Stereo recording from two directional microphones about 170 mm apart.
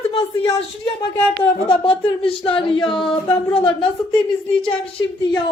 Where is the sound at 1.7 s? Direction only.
30° left (ahead or behind).